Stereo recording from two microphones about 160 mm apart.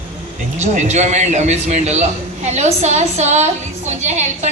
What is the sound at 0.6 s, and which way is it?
A woman's voice, 45° right (ahead or behind).